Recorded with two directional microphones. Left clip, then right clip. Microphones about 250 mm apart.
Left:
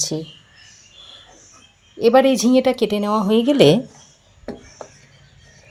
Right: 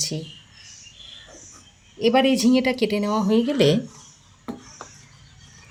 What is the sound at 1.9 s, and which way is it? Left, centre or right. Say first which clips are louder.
Speech: left 5 dB; centre.